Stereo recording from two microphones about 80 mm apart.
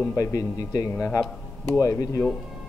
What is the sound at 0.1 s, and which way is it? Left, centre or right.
Speech, left.